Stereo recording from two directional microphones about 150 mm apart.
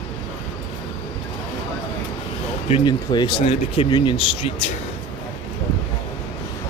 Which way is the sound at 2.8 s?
30° left (ahead or behind).